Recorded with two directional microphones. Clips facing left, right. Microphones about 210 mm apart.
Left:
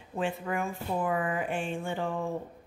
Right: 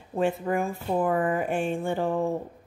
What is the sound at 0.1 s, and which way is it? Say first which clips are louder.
A woman's voice: right 6 dB; 40° right (ahead or behind).